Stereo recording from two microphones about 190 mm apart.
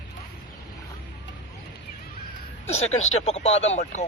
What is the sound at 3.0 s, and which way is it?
Speech, 35° left (ahead or behind).